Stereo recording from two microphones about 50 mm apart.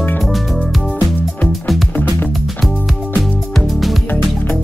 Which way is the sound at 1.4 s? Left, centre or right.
Centre.